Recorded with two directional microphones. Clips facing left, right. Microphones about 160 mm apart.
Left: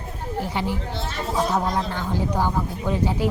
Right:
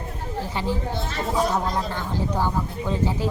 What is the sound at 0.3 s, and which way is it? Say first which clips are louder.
Speech: left 1 dB; 15° left (ahead or behind).